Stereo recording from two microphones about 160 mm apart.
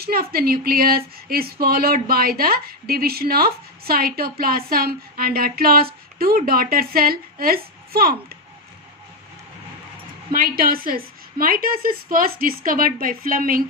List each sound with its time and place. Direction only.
0.0 s speech: 70° right (ahead or behind)
10.3 s a woman's voice: 65° right (ahead or behind)